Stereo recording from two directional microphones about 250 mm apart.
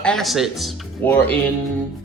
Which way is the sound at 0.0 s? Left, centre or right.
Centre.